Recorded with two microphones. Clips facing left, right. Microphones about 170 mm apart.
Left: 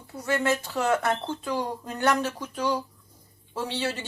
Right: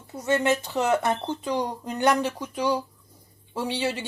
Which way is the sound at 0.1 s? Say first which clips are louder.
Right 3 dB; 20° right (ahead or behind).